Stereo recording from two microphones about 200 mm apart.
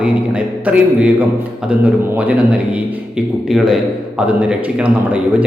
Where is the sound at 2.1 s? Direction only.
5° right (ahead or behind).